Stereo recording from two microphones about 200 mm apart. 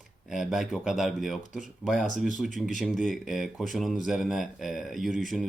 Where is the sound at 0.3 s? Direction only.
Centre (ahead or behind).